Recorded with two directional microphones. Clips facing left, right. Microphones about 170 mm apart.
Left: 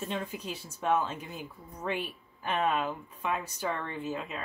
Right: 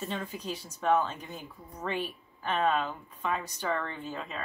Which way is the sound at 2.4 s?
10° left (ahead or behind).